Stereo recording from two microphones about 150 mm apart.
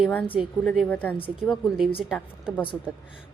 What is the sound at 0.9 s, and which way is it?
Speech, 10° left (ahead or behind).